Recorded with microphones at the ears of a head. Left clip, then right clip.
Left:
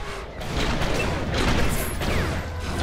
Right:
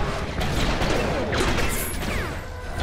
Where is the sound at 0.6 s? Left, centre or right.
Centre.